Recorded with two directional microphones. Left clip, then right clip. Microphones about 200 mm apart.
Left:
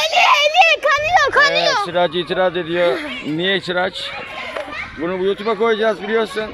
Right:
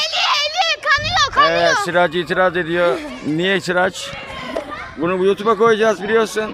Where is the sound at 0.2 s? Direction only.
15° left (ahead or behind).